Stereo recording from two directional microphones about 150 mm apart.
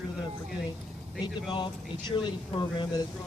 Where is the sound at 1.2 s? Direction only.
30° left (ahead or behind).